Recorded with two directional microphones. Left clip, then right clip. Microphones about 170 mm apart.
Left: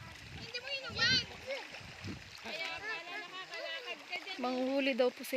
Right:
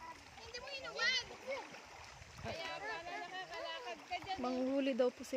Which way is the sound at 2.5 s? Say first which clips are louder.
Left 3 dB; 65° right (ahead or behind).